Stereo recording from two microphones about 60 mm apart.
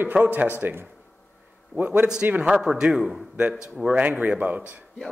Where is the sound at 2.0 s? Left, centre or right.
Centre.